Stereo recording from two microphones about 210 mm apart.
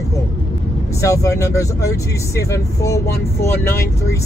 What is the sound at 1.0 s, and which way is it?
Speech, 15° left (ahead or behind).